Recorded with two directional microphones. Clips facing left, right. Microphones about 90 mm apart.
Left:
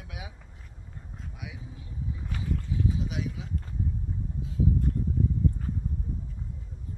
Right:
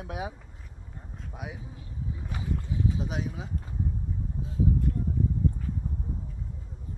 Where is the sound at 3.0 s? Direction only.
40° right (ahead or behind).